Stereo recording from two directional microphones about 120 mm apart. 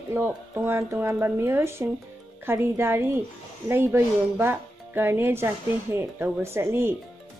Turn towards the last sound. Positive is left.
turn(degrees=-20)  # may be behind; listen again after turning